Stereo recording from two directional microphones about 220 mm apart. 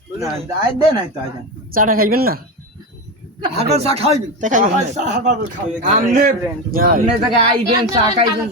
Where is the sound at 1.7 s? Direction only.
40° right (ahead or behind).